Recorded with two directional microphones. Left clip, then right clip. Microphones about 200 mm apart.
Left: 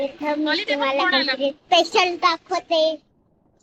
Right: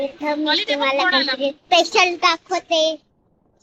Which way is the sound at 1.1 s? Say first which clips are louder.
Right 2 dB; 20° right (ahead or behind).